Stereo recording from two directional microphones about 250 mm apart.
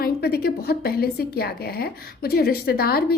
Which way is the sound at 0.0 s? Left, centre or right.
Left.